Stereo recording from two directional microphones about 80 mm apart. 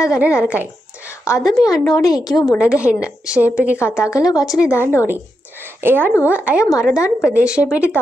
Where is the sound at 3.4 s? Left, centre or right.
Centre.